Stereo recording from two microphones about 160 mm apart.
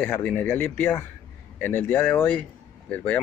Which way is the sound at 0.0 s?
10° left (ahead or behind).